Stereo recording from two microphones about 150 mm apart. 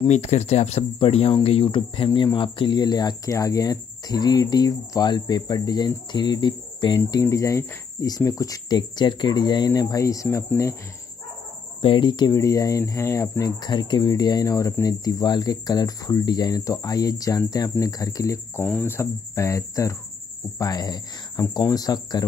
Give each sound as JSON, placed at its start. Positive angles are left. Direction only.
{"t": 0.0, "sound": "speech", "side_deg": 45}
{"t": 11.8, "sound": "speech", "side_deg": 30}